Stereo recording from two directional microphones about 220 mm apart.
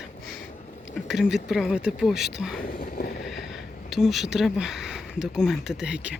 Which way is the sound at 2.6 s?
40° left (ahead or behind).